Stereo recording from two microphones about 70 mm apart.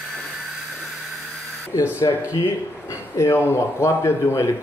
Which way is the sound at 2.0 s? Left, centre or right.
Left.